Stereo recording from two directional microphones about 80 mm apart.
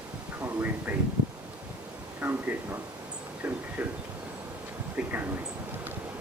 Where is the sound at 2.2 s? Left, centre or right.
Centre.